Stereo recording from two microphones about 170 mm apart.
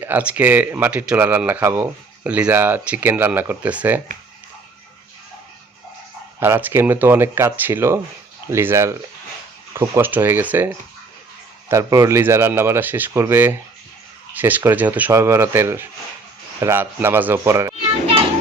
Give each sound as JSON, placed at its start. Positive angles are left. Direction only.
{"t": 0.0, "sound": "speech", "side_deg": -10}
{"t": 6.4, "sound": "speech", "side_deg": -10}
{"t": 11.7, "sound": "speech", "side_deg": -15}